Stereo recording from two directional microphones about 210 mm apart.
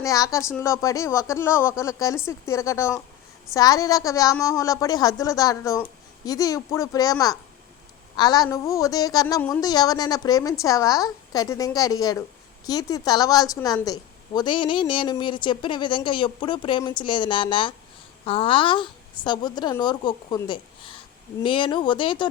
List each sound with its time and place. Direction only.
0.0 s a woman's voice: 15° left (ahead or behind)